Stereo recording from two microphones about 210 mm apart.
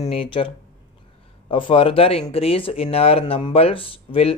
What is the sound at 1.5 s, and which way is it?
Speech, 25° left (ahead or behind).